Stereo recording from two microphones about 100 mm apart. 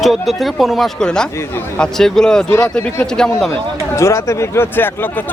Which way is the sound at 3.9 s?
30° left (ahead or behind).